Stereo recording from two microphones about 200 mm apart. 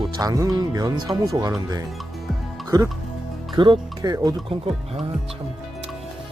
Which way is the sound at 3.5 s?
25° right (ahead or behind).